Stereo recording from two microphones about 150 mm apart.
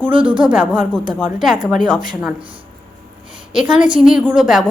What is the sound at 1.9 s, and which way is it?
Speech, 65° left (ahead or behind).